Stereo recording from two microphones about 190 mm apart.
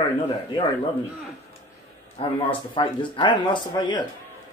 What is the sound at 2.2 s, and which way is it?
A man's voice, 30° left (ahead or behind).